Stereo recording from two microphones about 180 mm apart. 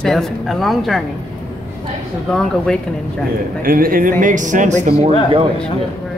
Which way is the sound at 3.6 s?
50° right (ahead or behind).